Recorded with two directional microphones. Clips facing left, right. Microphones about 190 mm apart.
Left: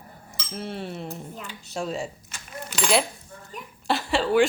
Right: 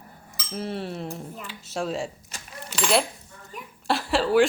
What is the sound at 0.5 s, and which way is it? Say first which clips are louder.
Dishes: right 2 dB; centre (ahead or behind).